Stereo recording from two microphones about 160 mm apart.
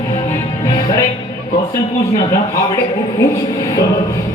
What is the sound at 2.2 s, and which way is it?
Speech, 20° left (ahead or behind).